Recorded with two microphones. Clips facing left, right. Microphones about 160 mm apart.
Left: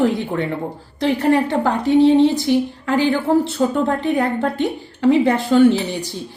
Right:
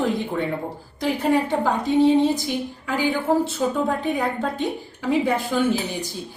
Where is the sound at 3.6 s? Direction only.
55° left (ahead or behind).